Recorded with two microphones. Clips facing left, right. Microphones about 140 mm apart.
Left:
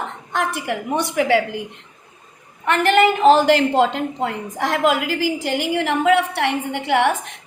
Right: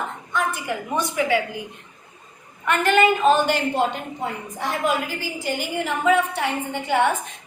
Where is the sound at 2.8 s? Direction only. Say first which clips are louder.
Left 4 dB; 80° left.